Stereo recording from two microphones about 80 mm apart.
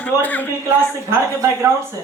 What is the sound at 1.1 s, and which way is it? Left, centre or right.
Speech, right.